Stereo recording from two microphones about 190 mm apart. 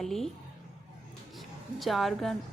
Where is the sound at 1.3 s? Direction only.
Centre (ahead or behind).